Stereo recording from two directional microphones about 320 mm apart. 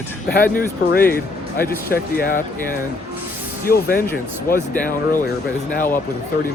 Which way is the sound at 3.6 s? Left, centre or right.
Left.